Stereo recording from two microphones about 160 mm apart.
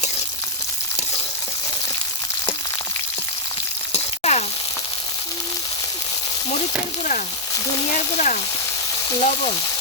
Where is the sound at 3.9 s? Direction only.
45° left (ahead or behind).